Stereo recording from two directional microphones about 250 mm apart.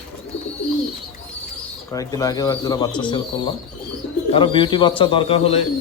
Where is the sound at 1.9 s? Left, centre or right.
Centre.